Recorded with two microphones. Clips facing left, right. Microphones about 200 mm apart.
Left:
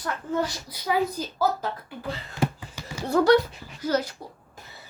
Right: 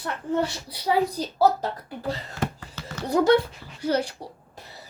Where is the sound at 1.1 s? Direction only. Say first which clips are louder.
Right 4 dB; 35° right (ahead or behind).